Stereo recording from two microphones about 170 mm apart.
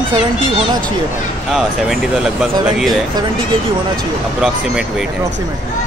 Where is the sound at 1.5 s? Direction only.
Centre (ahead or behind).